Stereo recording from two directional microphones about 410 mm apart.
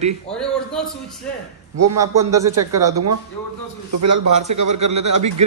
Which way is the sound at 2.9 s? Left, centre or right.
Right.